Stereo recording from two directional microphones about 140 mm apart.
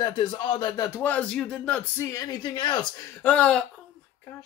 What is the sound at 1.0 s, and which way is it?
Speech, 10° left (ahead or behind).